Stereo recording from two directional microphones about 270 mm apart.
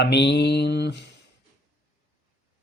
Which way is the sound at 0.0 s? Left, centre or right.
Left.